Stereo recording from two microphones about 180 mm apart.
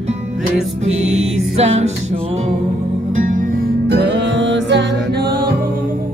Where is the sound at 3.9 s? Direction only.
75° right (ahead or behind).